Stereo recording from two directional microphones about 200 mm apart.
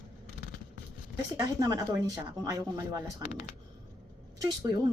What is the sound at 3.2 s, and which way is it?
Speech, 35° left (ahead or behind).